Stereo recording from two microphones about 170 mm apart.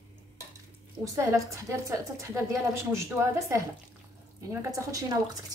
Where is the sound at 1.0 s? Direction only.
20° right (ahead or behind).